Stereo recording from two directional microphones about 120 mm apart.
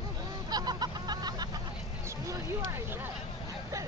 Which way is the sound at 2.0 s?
20° right (ahead or behind).